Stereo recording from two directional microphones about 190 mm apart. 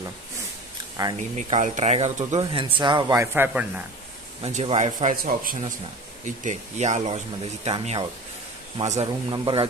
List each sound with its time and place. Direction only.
1.0 s speech: 20° right (ahead or behind)
1.3 s speech: 40° right (ahead or behind)
2.6 s speech: 25° right (ahead or behind)
4.4 s speech: 35° right (ahead or behind)